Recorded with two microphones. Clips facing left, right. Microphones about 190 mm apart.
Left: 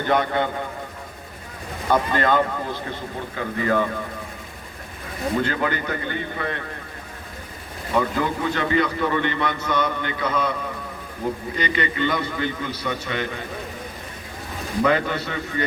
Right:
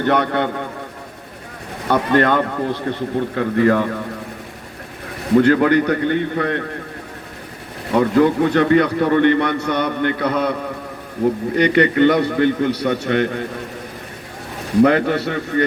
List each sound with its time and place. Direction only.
0.0 s speech: 70° right (ahead or behind)
1.9 s speech: 65° right (ahead or behind)
5.3 s a man's voice: 65° right (ahead or behind)
7.9 s a man's voice: 65° right (ahead or behind)
14.8 s a man's voice: 65° right (ahead or behind)